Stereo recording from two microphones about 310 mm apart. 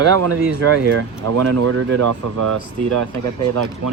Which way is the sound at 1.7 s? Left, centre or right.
Right.